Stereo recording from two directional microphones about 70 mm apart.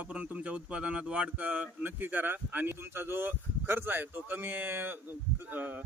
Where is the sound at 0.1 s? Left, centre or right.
Centre.